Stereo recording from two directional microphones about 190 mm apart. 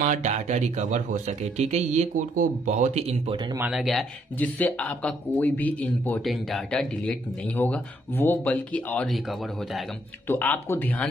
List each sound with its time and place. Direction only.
0.0 s speech: 40° right (ahead or behind)
3.5 s speech: 5° right (ahead or behind)
10.2 s speech: 10° left (ahead or behind)